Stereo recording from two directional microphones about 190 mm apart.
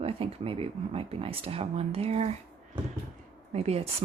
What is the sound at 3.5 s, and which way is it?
Speech, 35° right (ahead or behind).